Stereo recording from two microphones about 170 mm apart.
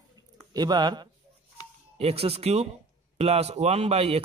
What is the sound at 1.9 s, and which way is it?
A man's voice, 35° right (ahead or behind).